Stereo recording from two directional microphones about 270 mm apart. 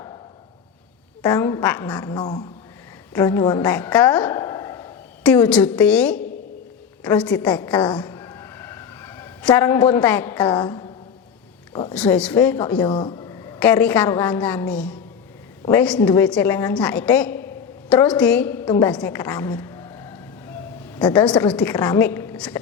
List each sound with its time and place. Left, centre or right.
1.2 s a woman's voice: centre
11.9 s a woman's voice: centre
12.9 s a woman's voice: centre